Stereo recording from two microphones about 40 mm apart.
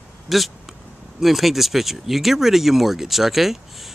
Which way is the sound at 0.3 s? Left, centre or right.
Centre.